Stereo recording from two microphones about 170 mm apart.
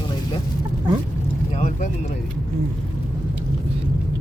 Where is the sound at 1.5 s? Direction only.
45° left (ahead or behind).